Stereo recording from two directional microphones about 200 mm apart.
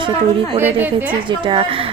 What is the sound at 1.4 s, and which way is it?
Speech, 25° right (ahead or behind).